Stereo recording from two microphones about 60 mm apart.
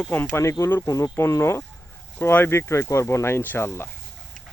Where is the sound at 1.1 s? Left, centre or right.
Left.